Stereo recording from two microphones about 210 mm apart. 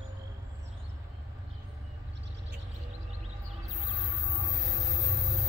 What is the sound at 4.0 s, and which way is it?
Music, 15° right (ahead or behind).